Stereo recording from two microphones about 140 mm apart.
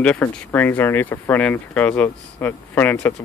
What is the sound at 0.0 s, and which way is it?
Speech, 10° left (ahead or behind).